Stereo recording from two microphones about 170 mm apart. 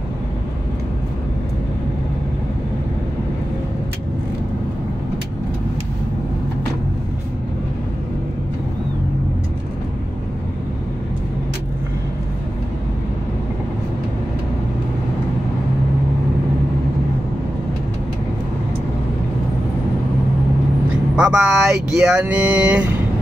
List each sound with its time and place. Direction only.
21.2 s speech: 5° right (ahead or behind)